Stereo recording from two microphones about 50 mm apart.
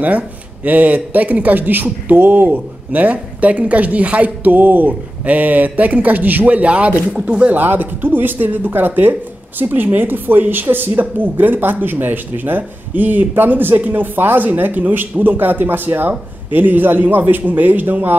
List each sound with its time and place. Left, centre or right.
0.7 s speech: right
7.5 s speech: right